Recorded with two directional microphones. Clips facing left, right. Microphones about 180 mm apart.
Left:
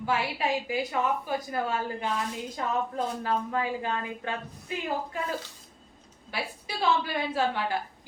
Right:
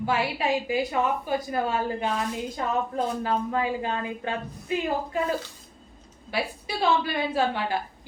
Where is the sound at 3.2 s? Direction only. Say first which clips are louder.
Right 3 dB; 25° right (ahead or behind).